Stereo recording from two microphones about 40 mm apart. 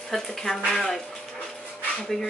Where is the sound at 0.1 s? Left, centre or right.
Centre.